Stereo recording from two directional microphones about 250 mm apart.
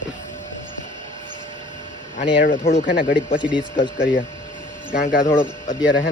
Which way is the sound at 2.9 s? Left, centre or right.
Left.